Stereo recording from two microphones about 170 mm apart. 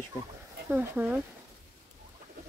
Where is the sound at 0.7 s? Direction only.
10° right (ahead or behind).